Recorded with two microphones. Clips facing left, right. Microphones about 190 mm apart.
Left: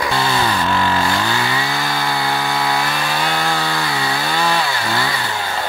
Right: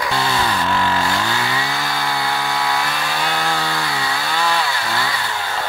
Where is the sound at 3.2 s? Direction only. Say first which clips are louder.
Even; 30° left (ahead or behind).